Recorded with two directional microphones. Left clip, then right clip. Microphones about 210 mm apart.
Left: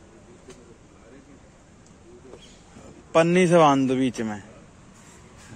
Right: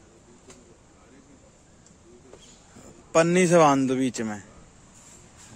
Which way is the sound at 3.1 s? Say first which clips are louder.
Left 1 dB; 25° right (ahead or behind).